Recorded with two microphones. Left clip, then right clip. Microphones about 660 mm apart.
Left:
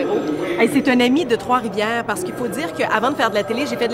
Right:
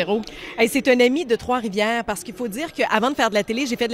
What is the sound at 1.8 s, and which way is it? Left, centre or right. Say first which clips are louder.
Speech: left 2 dB; right.